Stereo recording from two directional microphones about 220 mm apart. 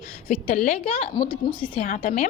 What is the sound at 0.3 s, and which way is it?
A woman's voice, 30° left (ahead or behind).